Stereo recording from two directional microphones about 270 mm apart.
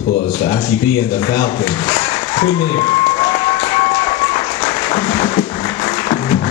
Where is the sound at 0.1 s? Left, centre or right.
Left.